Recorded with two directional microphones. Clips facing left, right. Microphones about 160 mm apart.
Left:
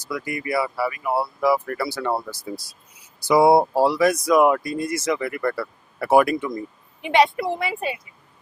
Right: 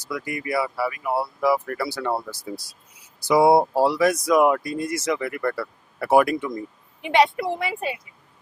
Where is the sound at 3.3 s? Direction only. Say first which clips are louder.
Left 1 dB; 10° left (ahead or behind).